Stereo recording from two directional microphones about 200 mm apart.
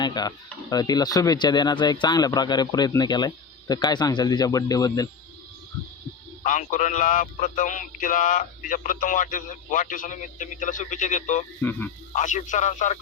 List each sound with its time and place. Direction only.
0.0 s speech: 20° left (ahead or behind)
6.4 s speech: 40° left (ahead or behind)
11.6 s speech: 10° left (ahead or behind)
12.1 s speech: 40° left (ahead or behind)